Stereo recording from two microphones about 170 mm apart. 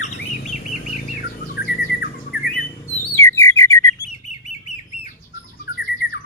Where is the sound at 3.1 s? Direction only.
15° left (ahead or behind).